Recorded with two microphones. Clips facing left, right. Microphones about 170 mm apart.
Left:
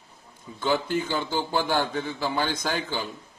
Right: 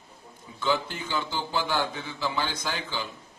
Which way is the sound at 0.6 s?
50° left (ahead or behind).